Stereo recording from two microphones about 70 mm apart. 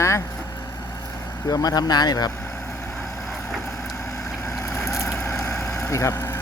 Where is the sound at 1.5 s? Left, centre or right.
Left.